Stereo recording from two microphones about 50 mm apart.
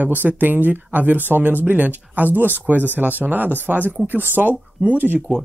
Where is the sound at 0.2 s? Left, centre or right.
Right.